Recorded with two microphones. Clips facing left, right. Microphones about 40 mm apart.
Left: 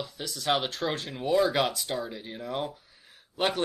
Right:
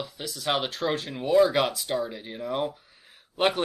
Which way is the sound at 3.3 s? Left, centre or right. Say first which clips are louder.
Right 4 dB; centre.